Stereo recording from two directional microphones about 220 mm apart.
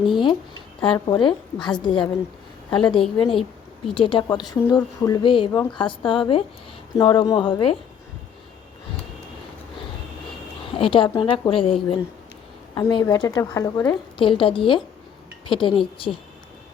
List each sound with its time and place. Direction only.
0.8 s a woman's voice: 20° left (ahead or behind)
10.8 s a woman's voice: 25° left (ahead or behind)